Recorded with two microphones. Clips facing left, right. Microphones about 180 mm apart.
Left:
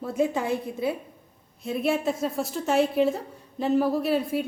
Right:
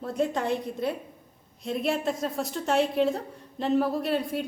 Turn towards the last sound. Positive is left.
turn(degrees=0)  # may be behind; listen again after turning